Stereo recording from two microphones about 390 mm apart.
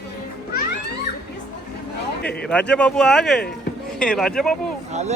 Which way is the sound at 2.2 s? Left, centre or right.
Centre.